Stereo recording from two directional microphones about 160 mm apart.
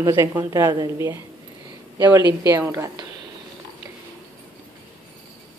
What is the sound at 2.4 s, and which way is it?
Speech, 15° right (ahead or behind).